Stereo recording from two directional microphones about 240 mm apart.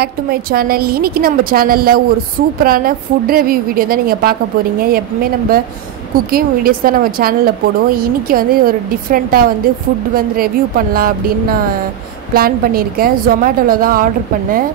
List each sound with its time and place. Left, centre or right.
0.0 s a woman's voice: right